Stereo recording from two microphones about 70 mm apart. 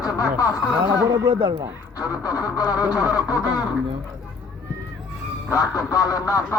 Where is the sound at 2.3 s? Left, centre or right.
Left.